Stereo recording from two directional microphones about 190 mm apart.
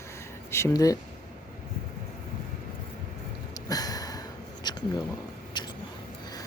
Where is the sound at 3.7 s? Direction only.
20° left (ahead or behind).